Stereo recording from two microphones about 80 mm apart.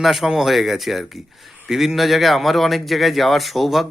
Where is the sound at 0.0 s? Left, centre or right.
Centre.